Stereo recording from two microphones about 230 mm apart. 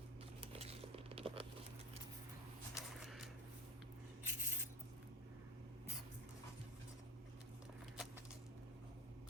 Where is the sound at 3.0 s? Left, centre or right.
Centre.